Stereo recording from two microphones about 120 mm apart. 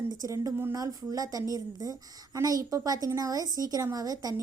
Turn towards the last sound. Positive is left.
turn(degrees=-30)  # may be behind; listen again after turning